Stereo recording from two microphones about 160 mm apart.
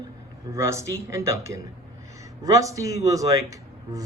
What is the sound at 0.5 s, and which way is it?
A man's voice, 20° right (ahead or behind).